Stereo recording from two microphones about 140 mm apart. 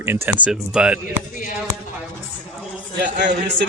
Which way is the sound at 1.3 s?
70° left (ahead or behind).